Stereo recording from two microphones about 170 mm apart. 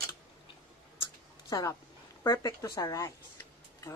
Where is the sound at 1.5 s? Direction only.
20° left (ahead or behind).